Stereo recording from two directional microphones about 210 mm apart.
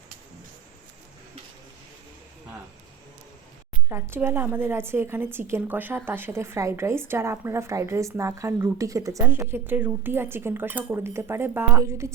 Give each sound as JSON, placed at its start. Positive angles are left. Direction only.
{"t": 3.8, "sound": "a woman's voice", "side_deg": -10}